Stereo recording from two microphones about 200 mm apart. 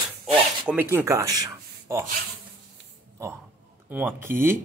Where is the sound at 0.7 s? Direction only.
10° right (ahead or behind).